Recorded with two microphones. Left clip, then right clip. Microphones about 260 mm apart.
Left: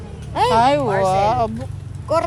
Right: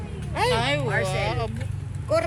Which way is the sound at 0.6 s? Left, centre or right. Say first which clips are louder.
Left 9 dB; left.